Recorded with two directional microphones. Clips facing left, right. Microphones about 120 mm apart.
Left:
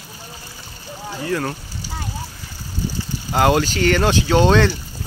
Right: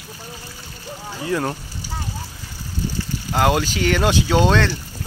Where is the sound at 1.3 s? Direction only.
20° right (ahead or behind).